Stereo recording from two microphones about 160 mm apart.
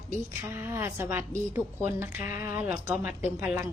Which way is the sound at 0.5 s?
15° right (ahead or behind).